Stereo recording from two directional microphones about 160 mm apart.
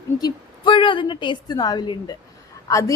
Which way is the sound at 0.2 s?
25° left (ahead or behind).